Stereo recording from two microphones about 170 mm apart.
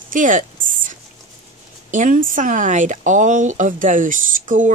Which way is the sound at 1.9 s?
50° right (ahead or behind).